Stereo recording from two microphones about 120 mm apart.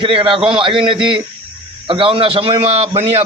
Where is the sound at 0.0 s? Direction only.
45° right (ahead or behind).